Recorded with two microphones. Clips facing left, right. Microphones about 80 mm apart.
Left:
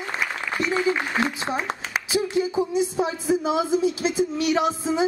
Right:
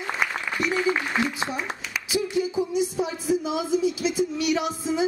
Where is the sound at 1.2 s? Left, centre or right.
Left.